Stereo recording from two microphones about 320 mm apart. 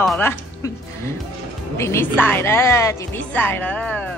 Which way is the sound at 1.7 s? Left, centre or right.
Centre.